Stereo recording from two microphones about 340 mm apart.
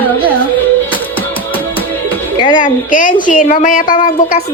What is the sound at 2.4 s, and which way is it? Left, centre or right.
Speech, centre.